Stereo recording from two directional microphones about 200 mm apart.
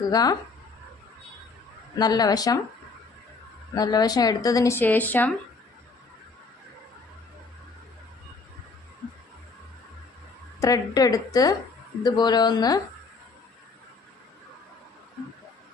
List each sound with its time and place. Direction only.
0.1 s speech: 20° left (ahead or behind)
2.0 s speech: 20° left (ahead or behind)
3.8 s speech: 20° left (ahead or behind)
10.6 s speech: 15° left (ahead or behind)